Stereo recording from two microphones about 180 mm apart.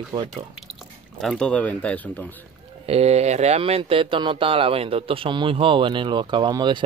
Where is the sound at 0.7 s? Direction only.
Centre (ahead or behind).